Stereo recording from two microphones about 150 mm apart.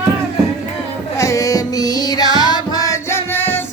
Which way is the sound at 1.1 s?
20° left (ahead or behind).